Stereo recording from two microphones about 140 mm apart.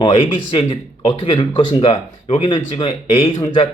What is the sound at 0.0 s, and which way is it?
Speech, 40° left (ahead or behind).